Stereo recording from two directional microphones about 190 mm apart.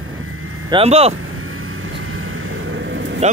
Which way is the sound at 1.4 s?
90° right.